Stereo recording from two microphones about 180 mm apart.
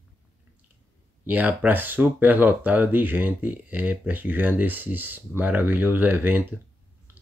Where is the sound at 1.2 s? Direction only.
10° right (ahead or behind).